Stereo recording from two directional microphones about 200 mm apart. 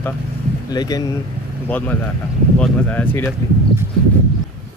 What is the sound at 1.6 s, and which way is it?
Speech, 10° left (ahead or behind).